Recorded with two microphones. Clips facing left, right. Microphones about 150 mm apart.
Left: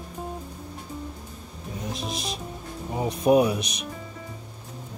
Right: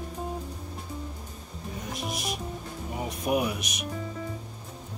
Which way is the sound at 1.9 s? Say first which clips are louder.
Right 1 dB; 25° left (ahead or behind).